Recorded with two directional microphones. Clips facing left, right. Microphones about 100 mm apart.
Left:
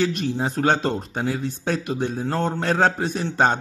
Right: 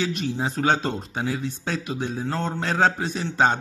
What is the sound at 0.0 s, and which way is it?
Speech, 50° left (ahead or behind).